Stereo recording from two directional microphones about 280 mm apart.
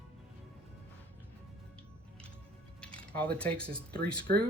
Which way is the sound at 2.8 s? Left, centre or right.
Centre.